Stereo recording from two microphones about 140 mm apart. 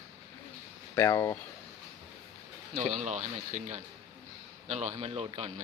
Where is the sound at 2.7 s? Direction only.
55° right (ahead or behind).